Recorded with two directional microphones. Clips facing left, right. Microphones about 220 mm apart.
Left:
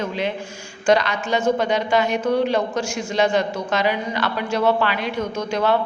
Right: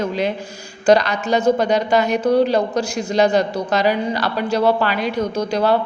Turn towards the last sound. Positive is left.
turn(degrees=-35)  # may be behind; listen again after turning